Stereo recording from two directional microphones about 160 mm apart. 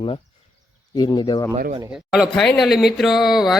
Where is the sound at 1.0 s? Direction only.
25° left (ahead or behind).